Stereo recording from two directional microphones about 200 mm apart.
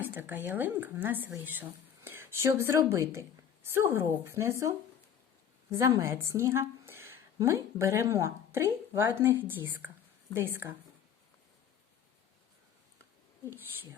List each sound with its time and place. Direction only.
0.0 s speech: 10° right (ahead or behind)
5.7 s speech: 15° right (ahead or behind)